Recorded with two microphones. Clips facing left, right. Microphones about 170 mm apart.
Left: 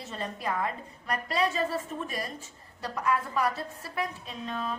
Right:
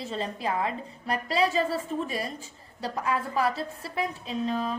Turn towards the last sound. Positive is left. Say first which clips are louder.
# right 6 dB
turn(degrees=-35)  # may be behind; listen again after turning